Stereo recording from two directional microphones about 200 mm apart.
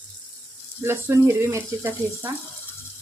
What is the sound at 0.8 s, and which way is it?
Speech, 10° right (ahead or behind).